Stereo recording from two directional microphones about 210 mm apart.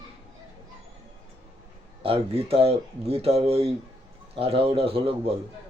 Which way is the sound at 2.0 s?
25° right (ahead or behind).